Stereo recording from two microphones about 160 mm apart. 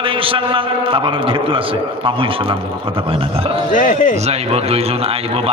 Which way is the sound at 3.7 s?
55° left (ahead or behind).